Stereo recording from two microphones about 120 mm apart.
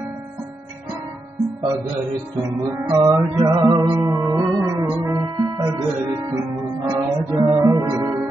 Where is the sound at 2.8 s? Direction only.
25° right (ahead or behind).